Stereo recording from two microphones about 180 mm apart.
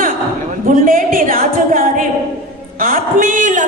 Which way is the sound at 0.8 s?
50° right (ahead or behind).